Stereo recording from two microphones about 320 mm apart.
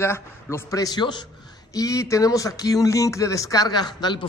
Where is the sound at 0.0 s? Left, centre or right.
Centre.